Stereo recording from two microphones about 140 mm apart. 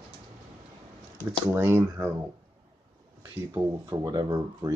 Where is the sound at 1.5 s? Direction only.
20° right (ahead or behind).